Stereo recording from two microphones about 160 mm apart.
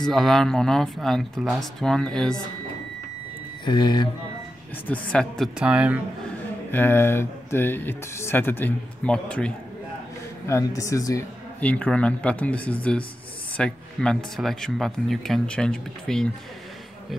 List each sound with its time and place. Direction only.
0.0 s speech: centre (ahead or behind)
3.6 s speech: 30° left (ahead or behind)
4.8 s speech: 10° left (ahead or behind)
5.6 s speech: 5° right (ahead or behind)
6.7 s speech: 15° left (ahead or behind)
10.4 s speech: 20° left (ahead or behind)
11.6 s speech: 10° left (ahead or behind)